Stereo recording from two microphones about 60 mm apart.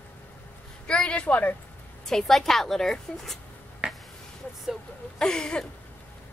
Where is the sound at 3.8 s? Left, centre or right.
Centre.